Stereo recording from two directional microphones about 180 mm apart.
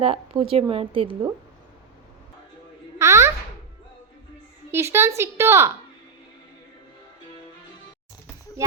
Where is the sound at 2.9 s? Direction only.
15° right (ahead or behind).